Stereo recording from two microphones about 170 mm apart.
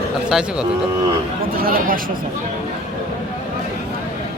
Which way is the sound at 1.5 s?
60° right (ahead or behind).